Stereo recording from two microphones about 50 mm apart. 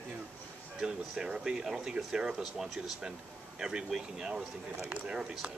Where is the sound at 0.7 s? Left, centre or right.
Centre.